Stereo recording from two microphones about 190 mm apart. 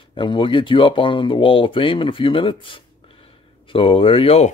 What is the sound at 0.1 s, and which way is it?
Speech, 25° left (ahead or behind).